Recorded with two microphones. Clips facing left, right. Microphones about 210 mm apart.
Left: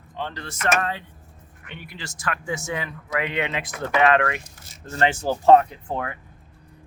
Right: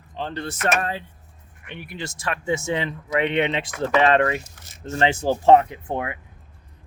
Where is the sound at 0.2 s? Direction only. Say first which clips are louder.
Right 3 dB; 30° right (ahead or behind).